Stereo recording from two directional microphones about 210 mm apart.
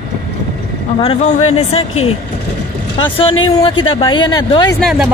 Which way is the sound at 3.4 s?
25° left (ahead or behind).